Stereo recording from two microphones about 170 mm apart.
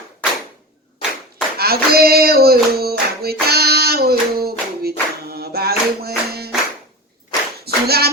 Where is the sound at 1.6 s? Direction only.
65° right (ahead or behind).